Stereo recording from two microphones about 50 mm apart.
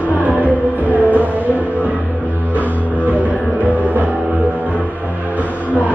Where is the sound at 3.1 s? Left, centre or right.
Right.